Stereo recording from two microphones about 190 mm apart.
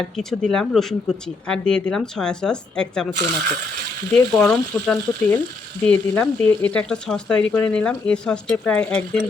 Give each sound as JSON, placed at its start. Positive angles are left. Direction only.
{"t": 0.2, "sound": "speech", "side_deg": 0}
{"t": 4.1, "sound": "speech", "side_deg": 5}